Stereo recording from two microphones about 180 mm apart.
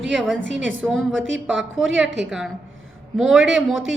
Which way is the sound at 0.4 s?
90° right.